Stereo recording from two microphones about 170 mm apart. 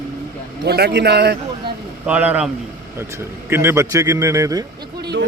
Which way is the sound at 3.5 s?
15° right (ahead or behind).